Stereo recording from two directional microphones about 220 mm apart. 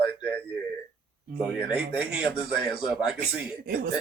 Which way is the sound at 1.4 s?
5° right (ahead or behind).